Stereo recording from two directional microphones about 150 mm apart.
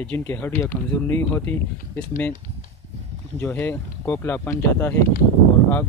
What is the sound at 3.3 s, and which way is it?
Speech, 15° left (ahead or behind).